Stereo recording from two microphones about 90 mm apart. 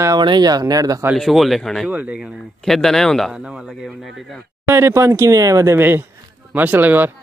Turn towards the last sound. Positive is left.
turn(degrees=-20)  # may be behind; listen again after turning